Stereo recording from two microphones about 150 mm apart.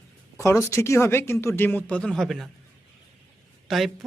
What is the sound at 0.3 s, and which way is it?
Speech, 20° left (ahead or behind).